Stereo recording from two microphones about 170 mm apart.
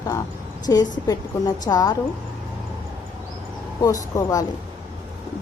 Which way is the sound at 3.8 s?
20° left (ahead or behind).